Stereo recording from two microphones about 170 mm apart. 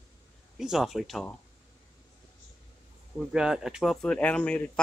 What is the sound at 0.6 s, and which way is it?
Speech, centre (ahead or behind).